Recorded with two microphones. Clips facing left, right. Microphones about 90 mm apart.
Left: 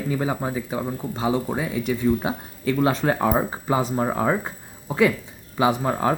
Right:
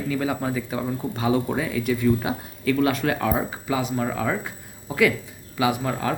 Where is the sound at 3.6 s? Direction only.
35° left (ahead or behind).